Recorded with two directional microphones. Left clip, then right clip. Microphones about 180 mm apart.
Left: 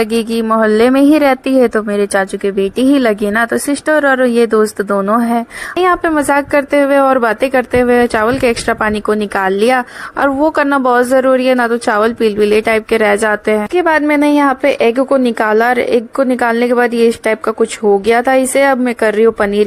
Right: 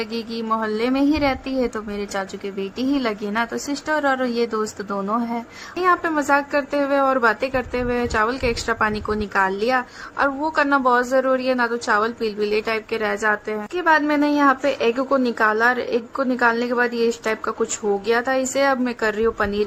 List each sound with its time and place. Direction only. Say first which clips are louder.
0.0 s a woman's voice: left 13 dB; 45° left (ahead or behind)